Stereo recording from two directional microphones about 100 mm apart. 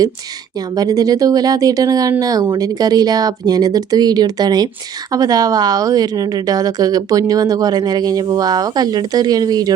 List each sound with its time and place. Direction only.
0.8 s a woman's voice: 40° right (ahead or behind)